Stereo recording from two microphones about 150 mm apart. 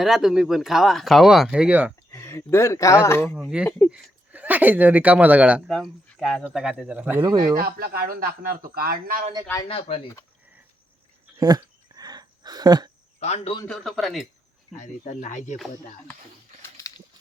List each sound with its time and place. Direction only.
0.0 s speech: centre (ahead or behind)
2.1 s speech: 15° left (ahead or behind)
3.3 s speech: 5° right (ahead or behind)
7.2 s speech: 25° right (ahead or behind)
7.5 s a man's voice: 85° right
9.6 s speech: 40° left (ahead or behind)
11.3 s a sound: 25° right (ahead or behind)
13.1 s speech: 45° left (ahead or behind)
13.7 s speech: 5° left (ahead or behind)
14.8 s speech: 55° left (ahead or behind)